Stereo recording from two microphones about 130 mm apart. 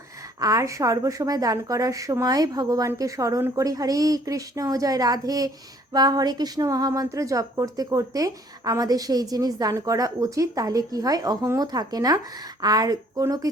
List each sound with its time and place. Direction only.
0.3 s a woman's voice: 25° right (ahead or behind)